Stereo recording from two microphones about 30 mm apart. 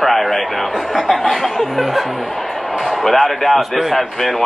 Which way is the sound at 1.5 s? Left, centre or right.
Centre.